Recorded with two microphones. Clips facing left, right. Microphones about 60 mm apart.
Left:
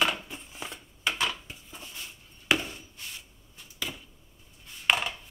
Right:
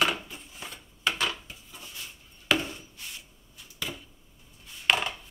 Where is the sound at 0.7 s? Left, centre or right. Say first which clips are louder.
Right 2 dB; centre.